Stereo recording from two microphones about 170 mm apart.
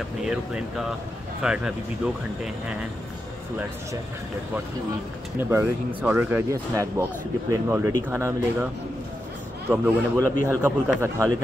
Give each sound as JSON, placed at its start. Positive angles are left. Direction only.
{"t": 0.2, "sound": "speech", "side_deg": 0}
{"t": 5.4, "sound": "speech", "side_deg": -15}
{"t": 9.7, "sound": "speech", "side_deg": -15}